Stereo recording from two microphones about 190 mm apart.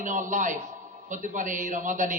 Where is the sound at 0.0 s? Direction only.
40° right (ahead or behind).